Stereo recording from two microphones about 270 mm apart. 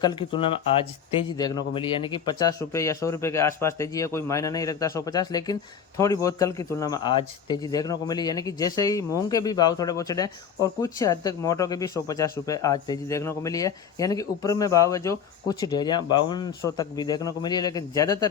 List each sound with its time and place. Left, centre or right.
0.0 s speech: centre